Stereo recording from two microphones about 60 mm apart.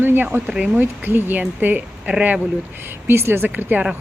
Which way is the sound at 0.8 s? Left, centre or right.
Right.